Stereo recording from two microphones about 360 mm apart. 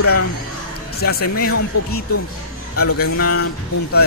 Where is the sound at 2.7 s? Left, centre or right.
Left.